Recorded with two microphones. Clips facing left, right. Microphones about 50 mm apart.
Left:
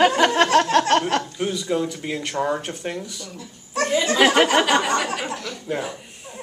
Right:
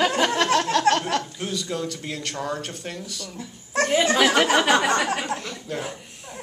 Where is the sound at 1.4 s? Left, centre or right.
Centre.